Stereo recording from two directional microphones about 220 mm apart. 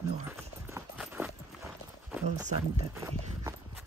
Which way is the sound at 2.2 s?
30° right (ahead or behind).